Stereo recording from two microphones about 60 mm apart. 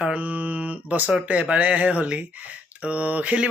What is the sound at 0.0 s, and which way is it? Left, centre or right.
Mantra, right.